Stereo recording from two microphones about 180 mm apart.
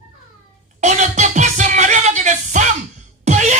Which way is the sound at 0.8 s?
40° right (ahead or behind).